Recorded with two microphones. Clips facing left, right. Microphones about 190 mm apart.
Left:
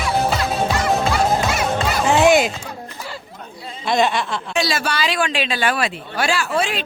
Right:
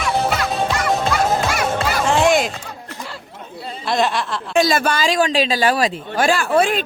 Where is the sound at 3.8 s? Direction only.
Centre (ahead or behind).